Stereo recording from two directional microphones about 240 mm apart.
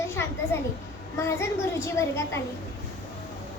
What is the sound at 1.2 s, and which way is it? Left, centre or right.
A child's voice, centre.